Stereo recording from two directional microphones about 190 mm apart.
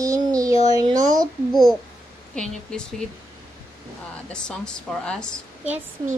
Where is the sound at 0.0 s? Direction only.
15° right (ahead or behind).